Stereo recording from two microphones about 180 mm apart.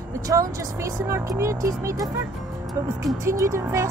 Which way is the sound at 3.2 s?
15° right (ahead or behind).